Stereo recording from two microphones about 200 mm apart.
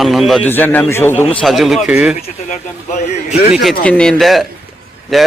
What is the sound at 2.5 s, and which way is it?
Speech, 35° left (ahead or behind).